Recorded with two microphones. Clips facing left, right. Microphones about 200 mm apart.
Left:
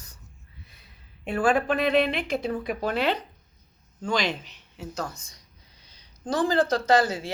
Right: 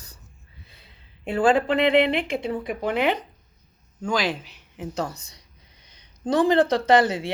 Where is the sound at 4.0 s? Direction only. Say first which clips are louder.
Right 2 dB; 5° right (ahead or behind).